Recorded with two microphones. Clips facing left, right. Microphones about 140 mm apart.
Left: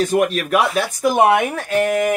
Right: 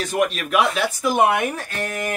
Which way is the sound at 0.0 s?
40° left (ahead or behind).